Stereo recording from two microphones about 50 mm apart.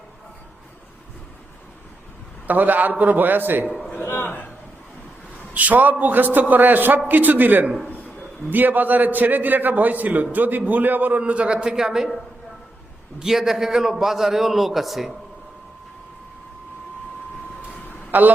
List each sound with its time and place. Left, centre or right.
2.5 s a man's voice: right
3.7 s a man's voice: centre
4.0 s a man's voice: left
5.5 s a man's voice: right
11.2 s a man's voice: right
13.2 s a man's voice: centre
18.1 s a man's voice: right